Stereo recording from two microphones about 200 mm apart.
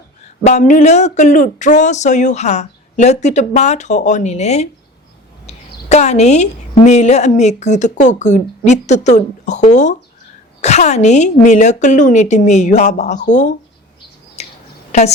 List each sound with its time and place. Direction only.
0.4 s a woman's voice: 35° left (ahead or behind)
14.4 s a sound: 35° left (ahead or behind)
14.9 s a woman's voice: 35° left (ahead or behind)